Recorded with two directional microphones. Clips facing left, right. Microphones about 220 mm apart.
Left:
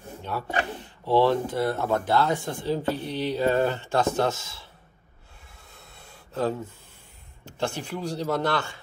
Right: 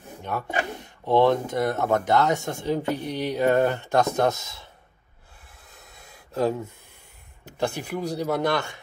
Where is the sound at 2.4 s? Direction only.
45° right (ahead or behind).